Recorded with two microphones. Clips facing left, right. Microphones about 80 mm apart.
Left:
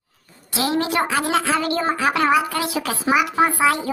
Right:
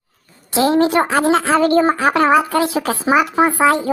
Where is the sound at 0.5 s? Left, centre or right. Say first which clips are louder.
Right 7 dB; right.